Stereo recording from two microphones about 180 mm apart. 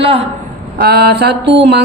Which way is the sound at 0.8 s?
60° right (ahead or behind).